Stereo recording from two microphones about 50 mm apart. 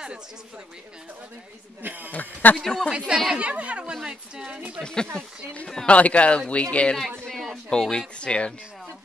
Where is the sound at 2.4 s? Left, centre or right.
Left.